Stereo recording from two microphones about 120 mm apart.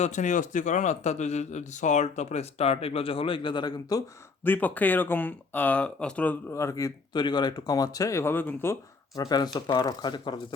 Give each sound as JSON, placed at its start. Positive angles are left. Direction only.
{"t": 0.0, "sound": "a man's voice", "side_deg": 85}
{"t": 4.4, "sound": "speech", "side_deg": 15}
{"t": 6.5, "sound": "speech", "side_deg": 25}
{"t": 7.2, "sound": "speech", "side_deg": 40}
{"t": 9.2, "sound": "speech", "side_deg": 35}